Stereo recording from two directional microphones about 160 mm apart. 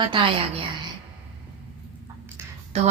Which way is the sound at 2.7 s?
40° right (ahead or behind).